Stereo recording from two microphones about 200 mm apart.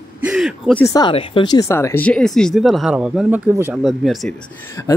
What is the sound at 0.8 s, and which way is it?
Speech, 20° left (ahead or behind).